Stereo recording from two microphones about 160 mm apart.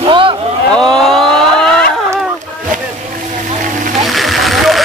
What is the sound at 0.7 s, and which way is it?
Speech, centre (ahead or behind).